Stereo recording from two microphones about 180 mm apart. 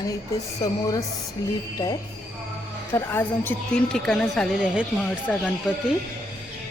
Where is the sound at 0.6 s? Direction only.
20° left (ahead or behind).